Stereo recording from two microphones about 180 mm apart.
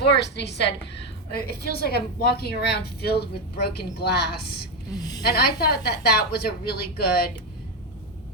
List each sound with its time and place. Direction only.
0.2 s a woman's voice: 70° left (ahead or behind)
4.9 s a woman's voice: 20° left (ahead or behind)
5.2 s a woman's voice: 60° left (ahead or behind)